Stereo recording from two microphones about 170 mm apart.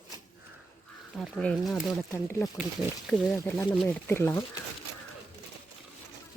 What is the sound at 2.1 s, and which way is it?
Speech, 15° left (ahead or behind).